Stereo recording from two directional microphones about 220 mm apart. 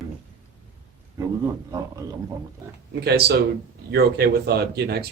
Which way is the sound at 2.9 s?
45° right (ahead or behind).